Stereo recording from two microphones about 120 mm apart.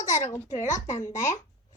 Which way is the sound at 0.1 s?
90° left.